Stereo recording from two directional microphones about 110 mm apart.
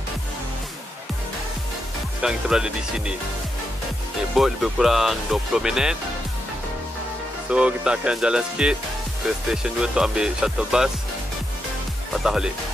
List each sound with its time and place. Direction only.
2.2 s speech: 5° right (ahead or behind)
4.4 s speech: centre (ahead or behind)
7.4 s speech: 10° right (ahead or behind)
12.1 s speech: 5° right (ahead or behind)